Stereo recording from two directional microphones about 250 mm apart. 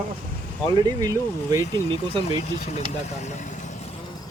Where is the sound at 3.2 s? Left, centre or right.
Left.